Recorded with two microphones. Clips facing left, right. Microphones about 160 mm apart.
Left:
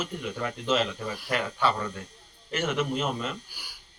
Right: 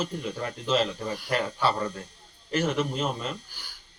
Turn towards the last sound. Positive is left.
turn(degrees=10)  # may be behind; listen again after turning